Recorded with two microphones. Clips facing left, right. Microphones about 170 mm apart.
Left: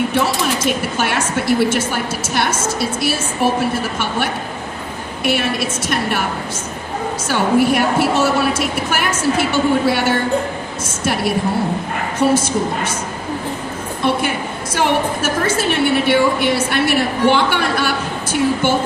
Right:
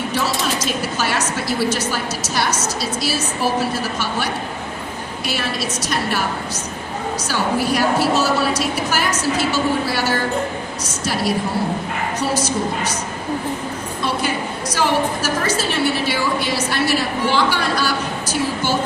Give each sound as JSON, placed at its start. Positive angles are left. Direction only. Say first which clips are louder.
{"t": 0.1, "sound": "a woman's voice", "louder": "left 4 dB", "side_deg": 55}
{"t": 7.3, "sound": "a woman's voice", "louder": "left 6 dB", "side_deg": 55}
{"t": 14.0, "sound": "a sound", "louder": "left 4 dB", "side_deg": 60}
{"t": 14.8, "sound": "a woman's voice", "louder": "left 2 dB", "side_deg": 60}